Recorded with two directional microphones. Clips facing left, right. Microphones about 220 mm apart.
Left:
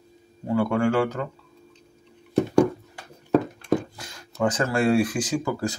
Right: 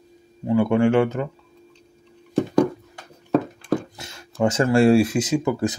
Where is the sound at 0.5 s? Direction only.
20° right (ahead or behind).